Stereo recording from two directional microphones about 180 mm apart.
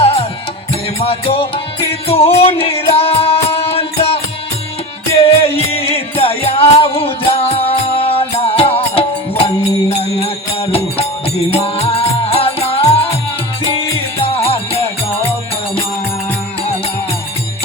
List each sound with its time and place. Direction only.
0.0 s music: 30° left (ahead or behind)
5.2 s music: 35° left (ahead or behind)
14.4 s music: 35° left (ahead or behind)